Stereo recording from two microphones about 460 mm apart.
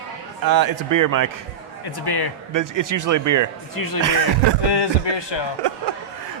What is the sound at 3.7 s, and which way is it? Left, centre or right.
Speech, left.